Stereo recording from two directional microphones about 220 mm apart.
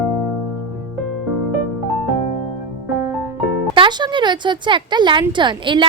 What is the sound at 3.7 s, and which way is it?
Speech, 20° right (ahead or behind).